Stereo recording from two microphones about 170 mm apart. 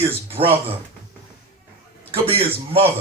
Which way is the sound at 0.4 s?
35° right (ahead or behind).